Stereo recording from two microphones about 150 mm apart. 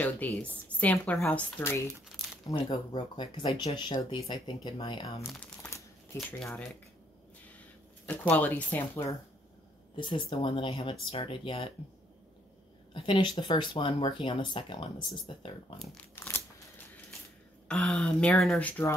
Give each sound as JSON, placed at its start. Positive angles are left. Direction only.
{"t": 0.0, "sound": "a woman's voice", "side_deg": 10}
{"t": 2.5, "sound": "speech", "side_deg": 30}
{"t": 5.2, "sound": "crumpling", "side_deg": 10}
{"t": 6.1, "sound": "a woman's voice", "side_deg": 15}
{"t": 8.1, "sound": "a woman's voice", "side_deg": 10}
{"t": 9.9, "sound": "speech", "side_deg": 30}
{"t": 12.9, "sound": "speech", "side_deg": 35}
{"t": 16.2, "sound": "a sound", "side_deg": 15}
{"t": 17.6, "sound": "a woman's voice", "side_deg": 10}